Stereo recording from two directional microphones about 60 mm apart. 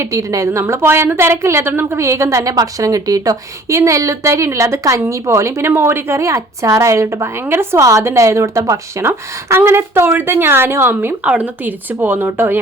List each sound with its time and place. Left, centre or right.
0.0 s a woman's voice: right
0.7 s a woman's voice: right
5.7 s a woman's voice: right
7.9 s a woman's voice: right
9.0 s a woman's voice: right
11.2 s speech: right